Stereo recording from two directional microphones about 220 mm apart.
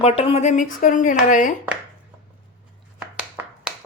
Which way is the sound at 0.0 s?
25° left (ahead or behind).